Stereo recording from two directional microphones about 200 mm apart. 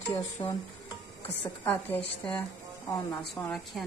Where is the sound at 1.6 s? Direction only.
10° left (ahead or behind).